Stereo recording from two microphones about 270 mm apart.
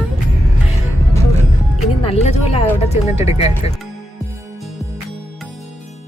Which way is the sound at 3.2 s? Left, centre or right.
Left.